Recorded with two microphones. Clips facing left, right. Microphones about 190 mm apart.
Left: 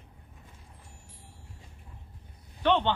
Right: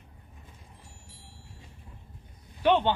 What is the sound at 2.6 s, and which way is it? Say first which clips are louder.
Speech: right 2 dB; 10° right (ahead or behind).